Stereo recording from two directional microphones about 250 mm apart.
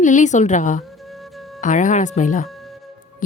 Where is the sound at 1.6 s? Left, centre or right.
Left.